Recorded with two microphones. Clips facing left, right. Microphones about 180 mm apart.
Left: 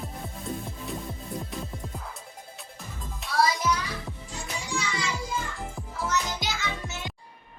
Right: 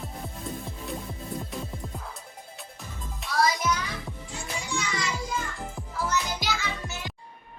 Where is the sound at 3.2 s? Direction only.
Centre (ahead or behind).